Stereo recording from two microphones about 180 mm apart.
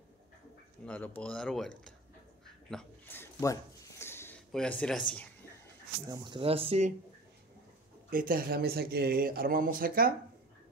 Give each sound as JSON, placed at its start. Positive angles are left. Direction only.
{"t": 0.8, "sound": "speech", "side_deg": 10}
{"t": 2.7, "sound": "a sound", "side_deg": 5}
{"t": 4.5, "sound": "speech", "side_deg": 5}
{"t": 6.0, "sound": "speech", "side_deg": -20}
{"t": 8.1, "sound": "speech", "side_deg": -50}